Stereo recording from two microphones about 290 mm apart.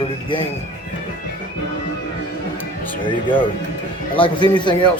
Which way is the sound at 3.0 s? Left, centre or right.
Centre.